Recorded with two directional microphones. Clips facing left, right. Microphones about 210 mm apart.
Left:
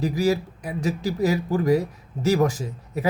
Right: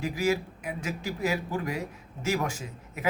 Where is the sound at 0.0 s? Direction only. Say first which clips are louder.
Left 5 dB; 40° left (ahead or behind).